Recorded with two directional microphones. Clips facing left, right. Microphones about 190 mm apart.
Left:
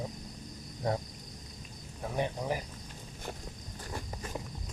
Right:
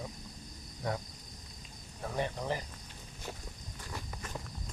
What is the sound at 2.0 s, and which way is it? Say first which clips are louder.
Speech: left 2 dB; 15° left (ahead or behind).